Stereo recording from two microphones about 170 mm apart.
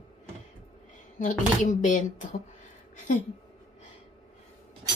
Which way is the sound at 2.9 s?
50° left (ahead or behind).